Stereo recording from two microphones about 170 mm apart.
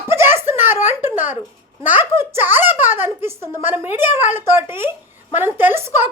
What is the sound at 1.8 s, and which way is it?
A child's voice, 10° right (ahead or behind).